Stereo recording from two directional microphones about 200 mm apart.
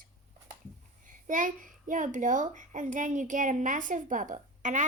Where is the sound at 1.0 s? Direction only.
40° right (ahead or behind).